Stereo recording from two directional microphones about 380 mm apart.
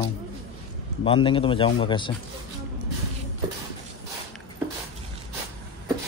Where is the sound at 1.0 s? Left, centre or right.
Centre.